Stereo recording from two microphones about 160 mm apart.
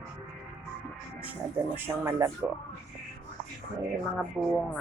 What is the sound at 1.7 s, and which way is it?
Speech, 15° right (ahead or behind).